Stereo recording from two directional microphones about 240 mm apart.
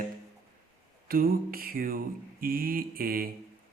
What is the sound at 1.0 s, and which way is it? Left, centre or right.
Speech, right.